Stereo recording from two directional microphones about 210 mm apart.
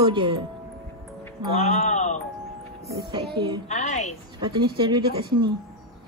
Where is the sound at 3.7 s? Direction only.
35° left (ahead or behind).